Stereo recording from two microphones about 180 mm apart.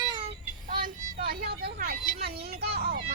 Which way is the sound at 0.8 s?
55° right (ahead or behind).